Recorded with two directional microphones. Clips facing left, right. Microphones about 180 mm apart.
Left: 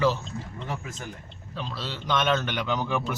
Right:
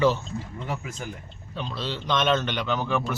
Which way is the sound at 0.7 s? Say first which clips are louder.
Right 2 dB; 15° right (ahead or behind).